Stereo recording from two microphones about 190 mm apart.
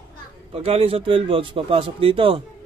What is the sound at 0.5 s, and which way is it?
A man's voice, 30° right (ahead or behind).